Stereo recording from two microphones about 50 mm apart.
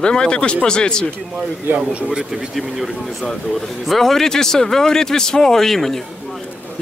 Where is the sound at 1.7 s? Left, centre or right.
Right.